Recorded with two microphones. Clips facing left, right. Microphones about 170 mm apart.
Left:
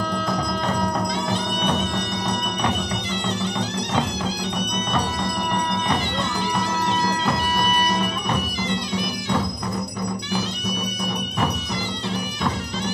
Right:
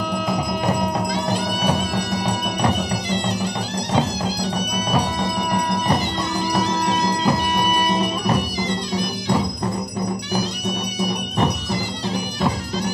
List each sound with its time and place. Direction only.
0.3 s music: 15° right (ahead or behind)
1.3 s music: 35° right (ahead or behind)
8.0 s music: 35° right (ahead or behind)
11.1 s music: 35° right (ahead or behind)